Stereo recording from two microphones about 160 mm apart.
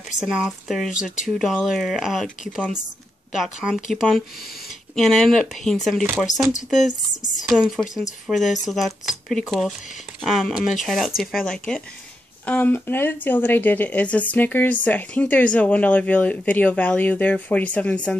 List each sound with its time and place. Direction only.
0.2 s speech: 5° right (ahead or behind)
3.3 s speech: centre (ahead or behind)
7.2 s a woman's voice: 50° left (ahead or behind)
7.4 s speech: 5° right (ahead or behind)